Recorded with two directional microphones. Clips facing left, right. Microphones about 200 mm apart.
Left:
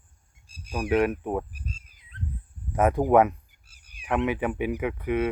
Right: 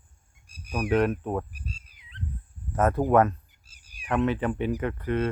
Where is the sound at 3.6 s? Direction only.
60° left (ahead or behind).